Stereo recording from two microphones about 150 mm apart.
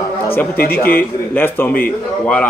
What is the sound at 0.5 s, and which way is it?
Speech, 85° left.